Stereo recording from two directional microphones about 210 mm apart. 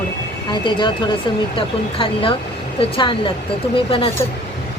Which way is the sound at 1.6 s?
25° left (ahead or behind).